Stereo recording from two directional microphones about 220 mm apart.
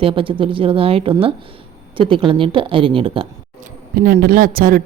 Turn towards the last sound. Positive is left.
turn(degrees=-40)  # may be behind; listen again after turning